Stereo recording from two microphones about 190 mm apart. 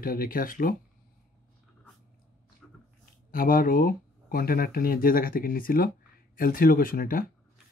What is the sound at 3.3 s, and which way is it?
Speech, 50° left (ahead or behind).